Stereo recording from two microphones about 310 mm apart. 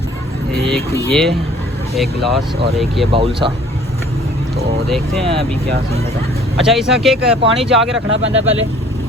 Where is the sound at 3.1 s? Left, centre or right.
Centre.